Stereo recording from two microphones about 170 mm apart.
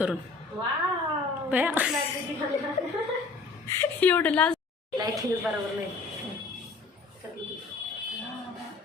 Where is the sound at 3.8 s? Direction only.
10° left (ahead or behind).